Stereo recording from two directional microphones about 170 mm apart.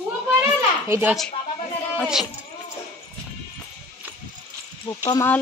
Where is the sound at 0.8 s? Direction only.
15° right (ahead or behind).